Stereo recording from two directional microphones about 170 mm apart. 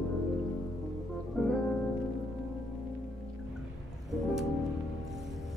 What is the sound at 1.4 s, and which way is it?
Music, centre (ahead or behind).